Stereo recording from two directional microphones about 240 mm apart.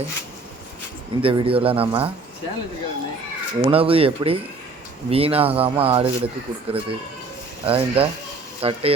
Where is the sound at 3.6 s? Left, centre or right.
Right.